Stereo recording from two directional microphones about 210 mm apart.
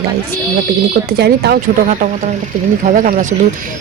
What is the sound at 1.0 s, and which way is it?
Speech, 50° right (ahead or behind).